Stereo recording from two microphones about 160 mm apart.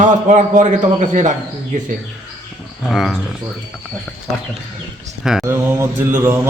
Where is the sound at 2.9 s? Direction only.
Centre (ahead or behind).